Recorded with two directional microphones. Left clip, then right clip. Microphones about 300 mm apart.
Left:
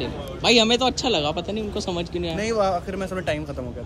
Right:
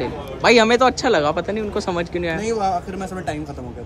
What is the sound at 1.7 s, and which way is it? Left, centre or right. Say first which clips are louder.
A man's voice: right 5 dB; centre.